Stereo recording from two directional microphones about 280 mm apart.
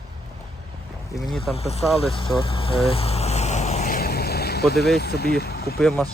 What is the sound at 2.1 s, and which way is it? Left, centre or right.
Vehicle, centre.